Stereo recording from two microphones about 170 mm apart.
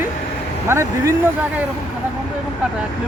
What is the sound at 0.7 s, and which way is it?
Speech, 15° right (ahead or behind).